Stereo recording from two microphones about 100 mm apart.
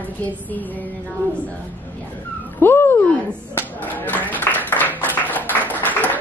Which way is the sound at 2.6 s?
20° left (ahead or behind).